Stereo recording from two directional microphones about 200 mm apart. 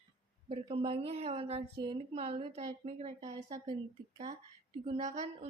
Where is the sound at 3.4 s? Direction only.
15° right (ahead or behind).